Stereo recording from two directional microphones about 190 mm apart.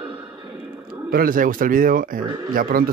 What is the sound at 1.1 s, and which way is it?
Speech, 50° right (ahead or behind).